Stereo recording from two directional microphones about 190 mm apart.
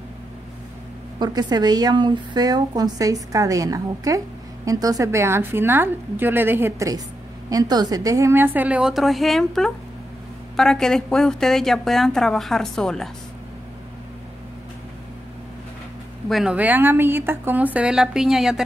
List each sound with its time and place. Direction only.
1.2 s a woman's voice: 20° right (ahead or behind); by 13.1 s centre (ahead or behind)
16.3 s a woman's voice: centre (ahead or behind)